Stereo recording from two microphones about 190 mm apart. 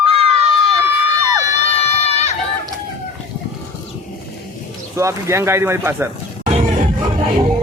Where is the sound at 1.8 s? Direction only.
35° left (ahead or behind).